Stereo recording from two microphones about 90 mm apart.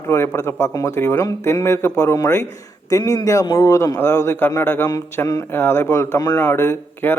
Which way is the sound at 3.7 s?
35° left (ahead or behind).